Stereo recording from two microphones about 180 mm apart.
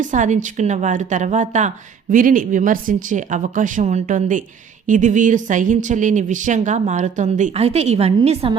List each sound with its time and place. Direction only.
0.0 s a woman's voice: 45° right (ahead or behind)